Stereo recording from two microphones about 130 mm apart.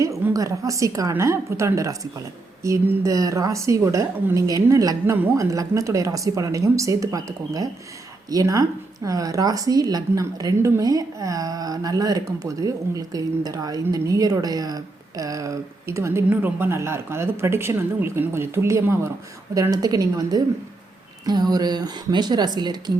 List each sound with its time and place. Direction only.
0.0 s a sound: 20° right (ahead or behind)
0.3 s speech: 25° right (ahead or behind)
2.8 s speech: 15° right (ahead or behind)
3.1 s speech: 25° right (ahead or behind)